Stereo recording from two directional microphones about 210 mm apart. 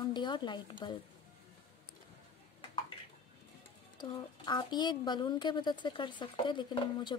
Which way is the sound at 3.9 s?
20° left (ahead or behind).